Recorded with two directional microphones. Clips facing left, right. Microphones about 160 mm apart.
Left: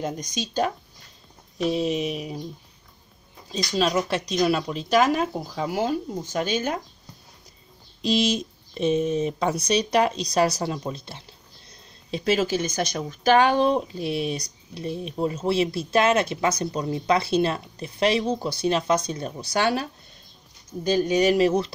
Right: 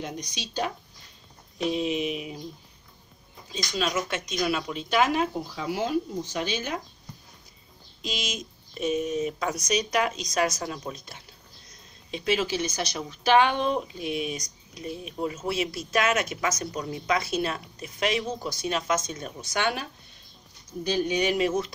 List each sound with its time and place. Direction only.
0.0 s speech: 45° left (ahead or behind)
3.5 s speech: 35° left (ahead or behind)
8.0 s speech: 35° left (ahead or behind)
12.1 s speech: 40° left (ahead or behind)